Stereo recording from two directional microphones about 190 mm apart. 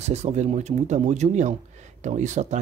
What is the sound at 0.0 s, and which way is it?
Speech, 35° right (ahead or behind).